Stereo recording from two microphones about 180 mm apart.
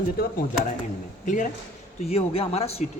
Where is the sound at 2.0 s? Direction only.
35° left (ahead or behind).